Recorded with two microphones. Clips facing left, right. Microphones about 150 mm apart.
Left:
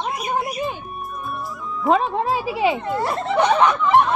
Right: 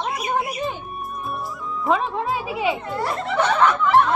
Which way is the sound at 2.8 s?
15° left (ahead or behind).